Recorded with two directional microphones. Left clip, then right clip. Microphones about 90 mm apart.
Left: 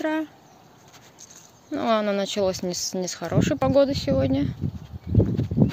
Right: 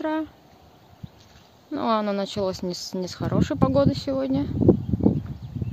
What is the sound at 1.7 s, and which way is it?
Speech, 30° right (ahead or behind).